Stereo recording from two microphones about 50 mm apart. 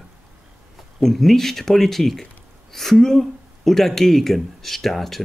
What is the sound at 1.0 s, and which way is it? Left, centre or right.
Speech, centre.